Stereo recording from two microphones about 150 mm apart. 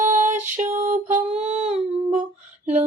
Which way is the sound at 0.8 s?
50° right (ahead or behind).